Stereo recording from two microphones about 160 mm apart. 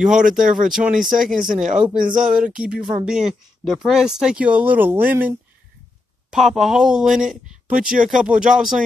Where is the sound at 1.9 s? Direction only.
60° right (ahead or behind).